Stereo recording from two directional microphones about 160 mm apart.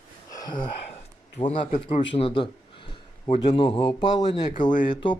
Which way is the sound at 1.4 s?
30° left (ahead or behind).